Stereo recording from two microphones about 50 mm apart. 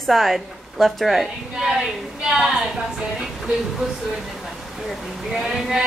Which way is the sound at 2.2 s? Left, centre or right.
Centre.